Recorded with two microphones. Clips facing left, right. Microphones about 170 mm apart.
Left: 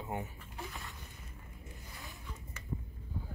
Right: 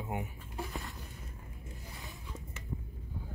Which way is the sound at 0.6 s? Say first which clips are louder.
Right 4 dB; 40° right (ahead or behind).